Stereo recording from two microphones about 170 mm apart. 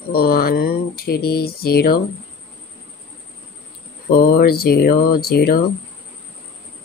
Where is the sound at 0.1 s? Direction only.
65° left (ahead or behind).